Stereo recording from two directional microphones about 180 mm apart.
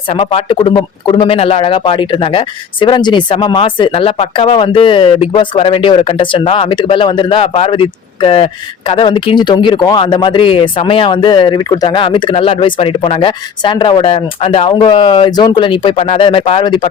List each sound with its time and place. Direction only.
0.1 s speech: 30° left (ahead or behind)